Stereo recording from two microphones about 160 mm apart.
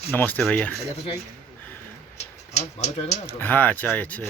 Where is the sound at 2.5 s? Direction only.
45° left (ahead or behind).